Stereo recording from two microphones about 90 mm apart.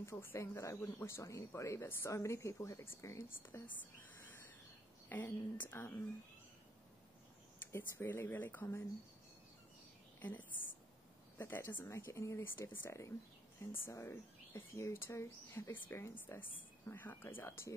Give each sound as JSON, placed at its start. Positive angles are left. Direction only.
{"t": 0.0, "sound": "speech", "side_deg": 25}
{"t": 3.6, "sound": "a sound", "side_deg": 20}
{"t": 5.1, "sound": "speech", "side_deg": 20}
{"t": 7.7, "sound": "speech", "side_deg": 25}
{"t": 11.3, "sound": "speech", "side_deg": 25}